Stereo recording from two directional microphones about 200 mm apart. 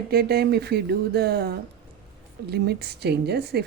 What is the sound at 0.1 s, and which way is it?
A woman's voice, 50° right (ahead or behind).